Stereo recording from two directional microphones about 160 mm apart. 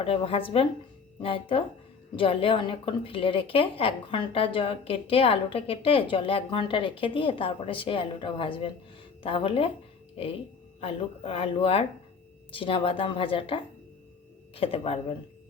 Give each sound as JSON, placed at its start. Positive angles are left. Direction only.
{"t": 0.0, "sound": "a woman's voice", "side_deg": 35}
{"t": 10.8, "sound": "a woman's voice", "side_deg": 35}